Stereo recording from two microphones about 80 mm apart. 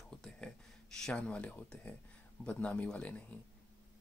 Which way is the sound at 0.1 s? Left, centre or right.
Centre.